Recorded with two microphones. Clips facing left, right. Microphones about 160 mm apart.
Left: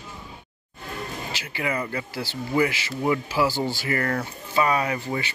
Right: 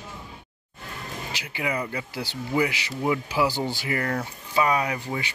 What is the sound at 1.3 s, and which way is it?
Speech, 15° right (ahead or behind).